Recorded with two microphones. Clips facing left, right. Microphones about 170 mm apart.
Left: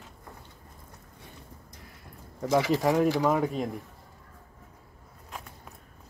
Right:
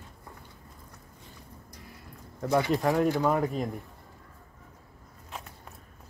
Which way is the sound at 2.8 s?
Centre (ahead or behind).